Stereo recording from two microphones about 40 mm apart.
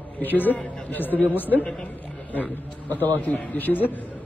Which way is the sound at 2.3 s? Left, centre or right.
Left.